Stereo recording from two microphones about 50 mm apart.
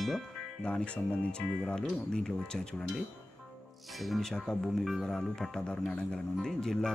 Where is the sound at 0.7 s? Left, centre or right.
Left.